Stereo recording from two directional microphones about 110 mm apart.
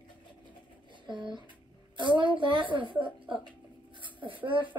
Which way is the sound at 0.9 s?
45° right (ahead or behind).